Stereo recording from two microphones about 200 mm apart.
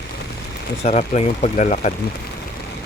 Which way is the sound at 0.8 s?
35° left (ahead or behind).